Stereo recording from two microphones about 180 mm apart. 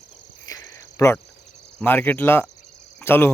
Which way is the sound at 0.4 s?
20° left (ahead or behind).